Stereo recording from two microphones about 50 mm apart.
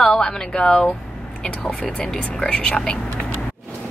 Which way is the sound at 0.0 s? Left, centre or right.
Centre.